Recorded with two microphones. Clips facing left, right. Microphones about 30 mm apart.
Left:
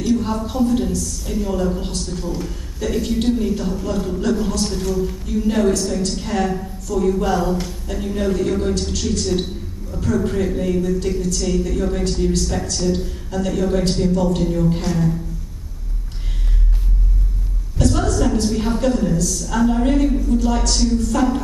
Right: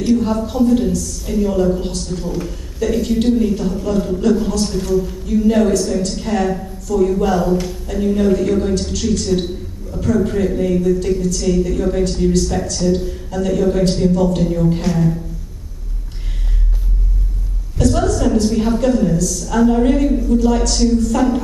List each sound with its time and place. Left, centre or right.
0.2 s a woman's voice: centre
17.7 s a sound: centre
19.1 s a woman's voice: centre